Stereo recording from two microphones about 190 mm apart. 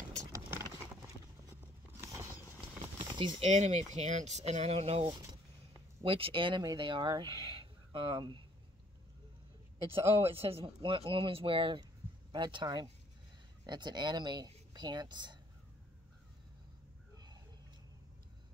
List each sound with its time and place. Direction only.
0.3 s vehicle: 15° right (ahead or behind)
3.2 s speech: 30° right (ahead or behind)
9.8 s speech: 30° right (ahead or behind)